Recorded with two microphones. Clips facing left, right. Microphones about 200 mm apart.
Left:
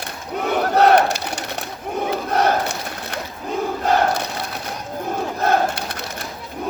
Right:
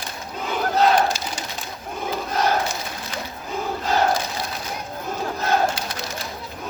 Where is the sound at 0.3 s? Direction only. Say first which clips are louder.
Left 4 dB; 65° left (ahead or behind).